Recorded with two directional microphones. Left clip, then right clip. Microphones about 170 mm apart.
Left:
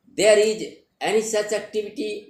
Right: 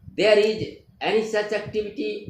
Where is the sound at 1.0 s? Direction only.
55° left (ahead or behind).